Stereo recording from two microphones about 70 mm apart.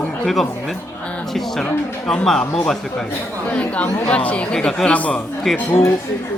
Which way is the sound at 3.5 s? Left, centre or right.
Left.